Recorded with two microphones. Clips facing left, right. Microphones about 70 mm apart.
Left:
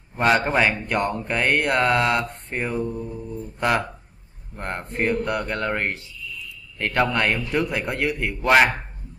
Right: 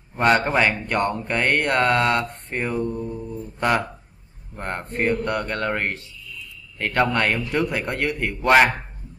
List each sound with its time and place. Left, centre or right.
0.2 s speech: centre